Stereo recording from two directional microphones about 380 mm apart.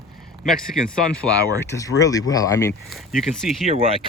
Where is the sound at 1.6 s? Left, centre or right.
Centre.